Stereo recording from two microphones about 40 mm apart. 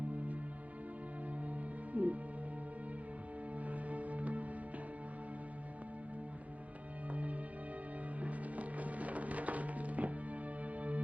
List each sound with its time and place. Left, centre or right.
1.5 s music: right
3.5 s music: right
7.1 s music: right